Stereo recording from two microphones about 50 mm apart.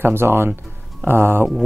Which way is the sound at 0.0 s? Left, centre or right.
Right.